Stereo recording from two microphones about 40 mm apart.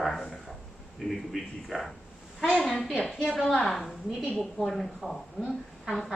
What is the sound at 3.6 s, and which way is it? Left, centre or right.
A woman's voice, centre.